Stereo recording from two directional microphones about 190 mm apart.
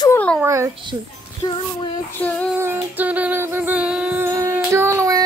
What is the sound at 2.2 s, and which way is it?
Female singing, 10° left (ahead or behind).